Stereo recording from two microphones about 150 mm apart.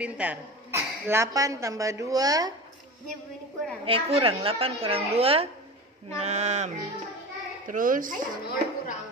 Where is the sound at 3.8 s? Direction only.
40° right (ahead or behind).